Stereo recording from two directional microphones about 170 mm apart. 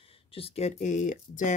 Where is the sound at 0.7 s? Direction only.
45° left (ahead or behind).